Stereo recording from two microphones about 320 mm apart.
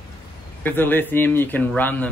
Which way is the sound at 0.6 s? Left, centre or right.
Centre.